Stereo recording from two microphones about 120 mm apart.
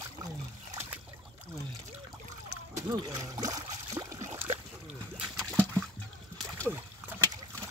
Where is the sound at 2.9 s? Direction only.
35° right (ahead or behind).